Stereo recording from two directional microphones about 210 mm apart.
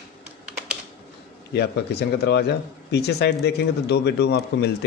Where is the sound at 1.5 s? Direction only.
50° left (ahead or behind).